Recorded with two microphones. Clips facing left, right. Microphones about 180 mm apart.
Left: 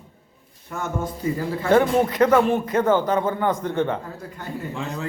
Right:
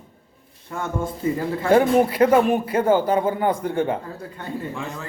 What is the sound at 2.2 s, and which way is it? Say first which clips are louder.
Speech: even; 30° right (ahead or behind).